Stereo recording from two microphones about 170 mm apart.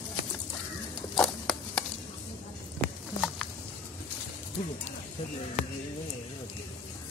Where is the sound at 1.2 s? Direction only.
Centre (ahead or behind).